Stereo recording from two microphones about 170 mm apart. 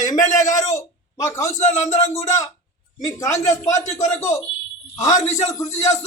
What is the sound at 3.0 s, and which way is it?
A man's voice, 20° left (ahead or behind).